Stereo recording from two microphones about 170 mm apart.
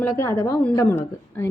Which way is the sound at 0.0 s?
20° left (ahead or behind).